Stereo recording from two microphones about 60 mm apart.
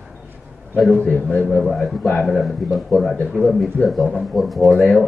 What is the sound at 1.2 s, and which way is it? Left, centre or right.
Speech, centre.